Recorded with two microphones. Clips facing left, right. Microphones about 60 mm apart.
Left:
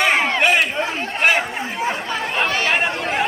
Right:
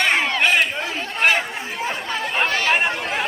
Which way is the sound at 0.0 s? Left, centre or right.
Centre.